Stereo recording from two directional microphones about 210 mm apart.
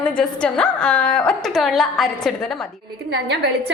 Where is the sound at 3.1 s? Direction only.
55° right (ahead or behind).